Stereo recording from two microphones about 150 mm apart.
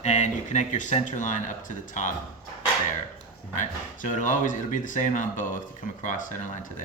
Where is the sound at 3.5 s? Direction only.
55° left (ahead or behind).